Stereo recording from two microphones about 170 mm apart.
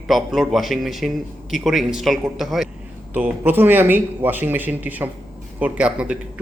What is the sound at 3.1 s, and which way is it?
Speech, 10° right (ahead or behind).